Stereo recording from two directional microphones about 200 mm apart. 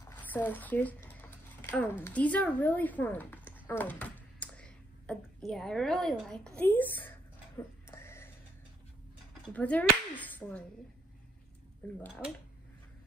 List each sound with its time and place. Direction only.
0.0 s speech: 10° left (ahead or behind)
3.6 s a sound: 10° left (ahead or behind)
9.5 s speech: 5° left (ahead or behind)